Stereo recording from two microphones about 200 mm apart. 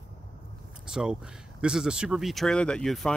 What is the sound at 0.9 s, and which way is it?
Speech, 5° right (ahead or behind).